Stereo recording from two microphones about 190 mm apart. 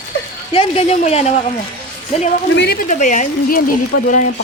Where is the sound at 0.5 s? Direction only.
30° left (ahead or behind).